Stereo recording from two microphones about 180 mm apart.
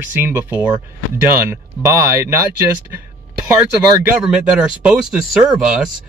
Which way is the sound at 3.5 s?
5° right (ahead or behind).